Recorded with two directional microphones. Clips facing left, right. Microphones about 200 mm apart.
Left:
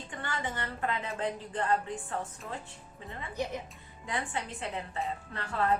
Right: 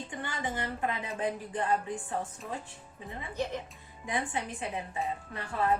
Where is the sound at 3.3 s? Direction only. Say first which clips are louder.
Right 1 dB; 15° left (ahead or behind).